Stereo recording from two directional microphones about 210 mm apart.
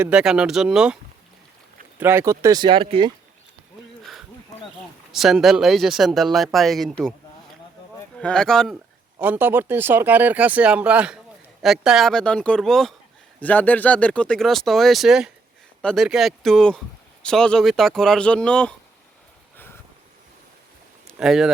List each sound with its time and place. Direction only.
0.0 s speech: 5° right (ahead or behind)
2.0 s speech: 10° right (ahead or behind); by 3.1 s 25° right (ahead or behind)
5.1 s speech: centre (ahead or behind)
9.2 s speech: 10° right (ahead or behind)
21.1 s speech: centre (ahead or behind)